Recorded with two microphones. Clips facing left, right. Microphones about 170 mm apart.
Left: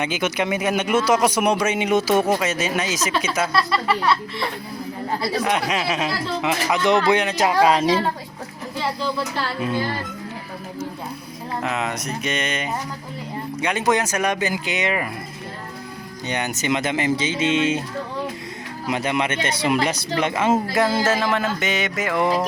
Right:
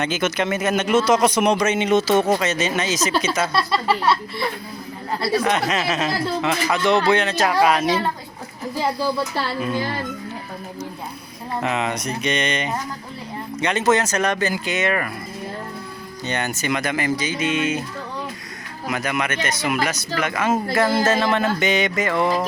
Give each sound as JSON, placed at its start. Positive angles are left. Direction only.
{"t": 0.0, "sound": "speech", "side_deg": 10}
{"t": 3.5, "sound": "speech", "side_deg": -25}
{"t": 5.4, "sound": "speech", "side_deg": 10}
{"t": 11.6, "sound": "speech", "side_deg": 0}
{"t": 16.2, "sound": "speech", "side_deg": 15}
{"t": 18.9, "sound": "speech", "side_deg": 25}
{"t": 20.8, "sound": "speech", "side_deg": 5}